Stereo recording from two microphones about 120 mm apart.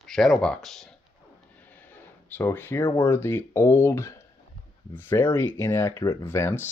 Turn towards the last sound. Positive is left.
turn(degrees=20)  # may be behind; listen again after turning